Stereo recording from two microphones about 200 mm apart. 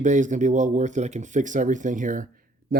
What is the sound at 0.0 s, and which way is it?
Speech, 40° right (ahead or behind).